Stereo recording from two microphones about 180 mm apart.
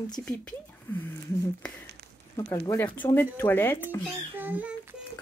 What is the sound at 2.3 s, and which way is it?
Speech, 20° left (ahead or behind).